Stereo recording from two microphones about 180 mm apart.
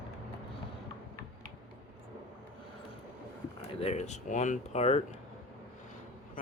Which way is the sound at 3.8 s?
40° left (ahead or behind).